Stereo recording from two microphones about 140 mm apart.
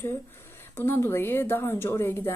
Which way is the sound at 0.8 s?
15° left (ahead or behind).